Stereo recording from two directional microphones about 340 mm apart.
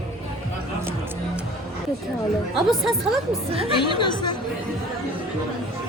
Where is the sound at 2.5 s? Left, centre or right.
Centre.